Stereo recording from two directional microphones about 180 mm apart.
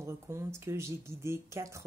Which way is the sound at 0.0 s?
15° right (ahead or behind).